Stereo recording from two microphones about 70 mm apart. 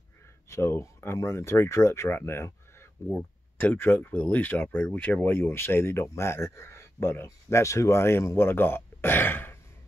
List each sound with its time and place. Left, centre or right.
0.5 s speech: left